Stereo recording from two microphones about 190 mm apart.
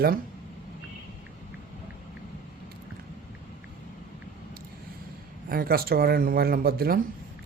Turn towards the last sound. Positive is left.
turn(degrees=-50)  # may be behind; listen again after turning